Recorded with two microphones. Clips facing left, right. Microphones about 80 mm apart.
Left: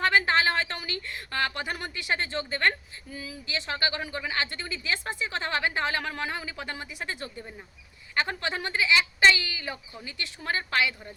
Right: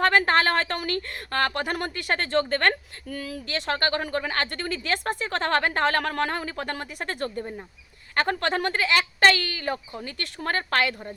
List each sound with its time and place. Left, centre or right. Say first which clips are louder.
0.0 s speech: right 3 dB; right